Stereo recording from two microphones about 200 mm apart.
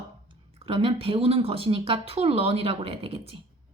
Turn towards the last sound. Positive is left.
turn(degrees=-30)  # may be behind; listen again after turning